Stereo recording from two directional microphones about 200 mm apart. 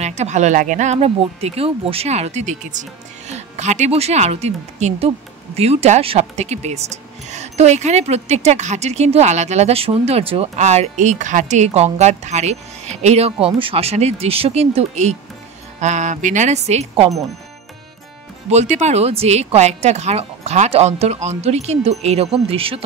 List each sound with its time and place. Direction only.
0.0 s speech: 35° right (ahead or behind)
18.5 s speech: 35° right (ahead or behind)